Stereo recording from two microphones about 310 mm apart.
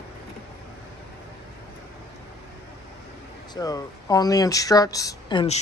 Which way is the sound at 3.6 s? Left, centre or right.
Centre.